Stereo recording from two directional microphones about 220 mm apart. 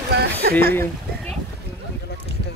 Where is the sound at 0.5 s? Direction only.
10° left (ahead or behind).